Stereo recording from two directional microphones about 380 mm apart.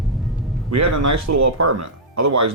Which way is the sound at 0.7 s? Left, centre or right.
Right.